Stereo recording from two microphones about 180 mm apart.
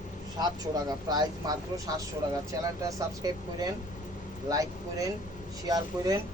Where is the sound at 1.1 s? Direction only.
20° right (ahead or behind).